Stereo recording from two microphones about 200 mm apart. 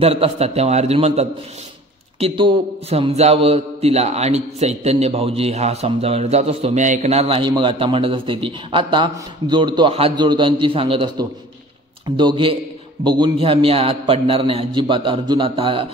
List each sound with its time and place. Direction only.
0.0 s a man's voice: 30° right (ahead or behind)